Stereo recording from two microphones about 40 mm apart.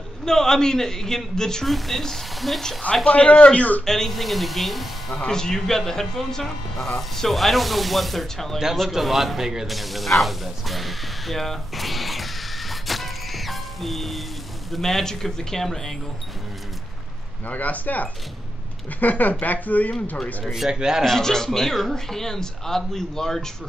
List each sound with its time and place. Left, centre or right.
0.2 s speech: centre
3.1 s speech: left
3.8 s speech: centre
5.1 s speech: centre
8.9 s speech: centre
9.7 s spray: centre
14.7 s speech: centre
17.5 s speech: left
20.5 s speech: centre
21.0 s speech: centre